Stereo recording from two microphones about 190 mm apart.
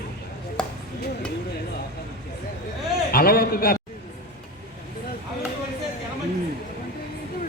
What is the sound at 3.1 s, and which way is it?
Speech, 50° left (ahead or behind).